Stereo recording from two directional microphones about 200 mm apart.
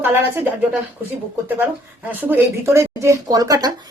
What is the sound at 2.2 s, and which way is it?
A woman's voice, 10° right (ahead or behind).